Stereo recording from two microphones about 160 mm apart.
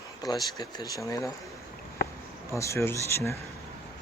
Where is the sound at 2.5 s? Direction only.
20° left (ahead or behind).